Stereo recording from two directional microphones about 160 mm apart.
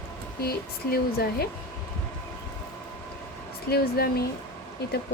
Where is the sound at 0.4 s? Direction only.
75° left (ahead or behind).